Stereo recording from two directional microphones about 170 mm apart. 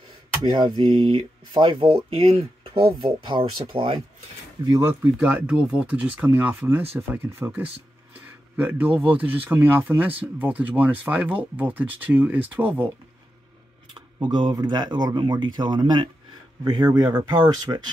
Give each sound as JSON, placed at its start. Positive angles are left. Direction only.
{"t": 0.5, "sound": "speech", "side_deg": -30}
{"t": 4.6, "sound": "speech", "side_deg": -15}
{"t": 13.9, "sound": "speech", "side_deg": -25}